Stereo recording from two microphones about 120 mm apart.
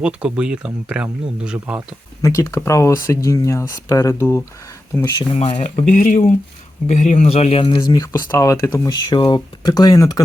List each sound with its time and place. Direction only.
0.0 s speech: 10° right (ahead or behind)
2.2 s speech: 25° left (ahead or behind)
4.9 s speech: centre (ahead or behind)
5.3 s speech: 55° left (ahead or behind)
5.5 s speech: 80° left
7.3 s speech: 55° left (ahead or behind); by 9.0 s 25° left (ahead or behind)
9.1 s speech: 35° left (ahead or behind)